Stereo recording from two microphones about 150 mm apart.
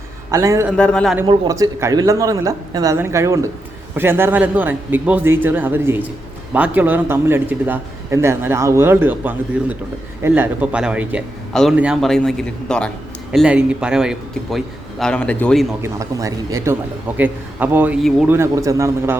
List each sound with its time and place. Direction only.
0.3 s speech: 20° right (ahead or behind)
0.8 s a man's voice: 5° left (ahead or behind)
1.5 s a man's voice: 20° right (ahead or behind); by 12.9 s 5° left (ahead or behind)
13.3 s a man's voice: 5° right (ahead or behind)
15.8 s a man's voice: 20° right (ahead or behind)